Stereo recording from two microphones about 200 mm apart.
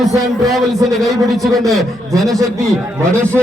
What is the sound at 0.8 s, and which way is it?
Speech, 15° right (ahead or behind).